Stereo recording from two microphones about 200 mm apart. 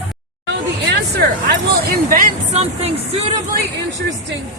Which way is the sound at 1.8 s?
45° right (ahead or behind).